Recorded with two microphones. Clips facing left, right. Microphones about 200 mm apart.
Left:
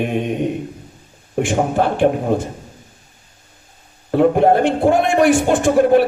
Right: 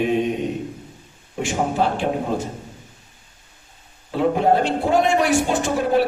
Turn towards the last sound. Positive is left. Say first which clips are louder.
# left 6 dB
turn(degrees=55)  # may be behind; listen again after turning